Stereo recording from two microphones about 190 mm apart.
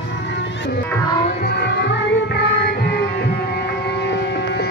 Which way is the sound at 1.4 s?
55° left (ahead or behind).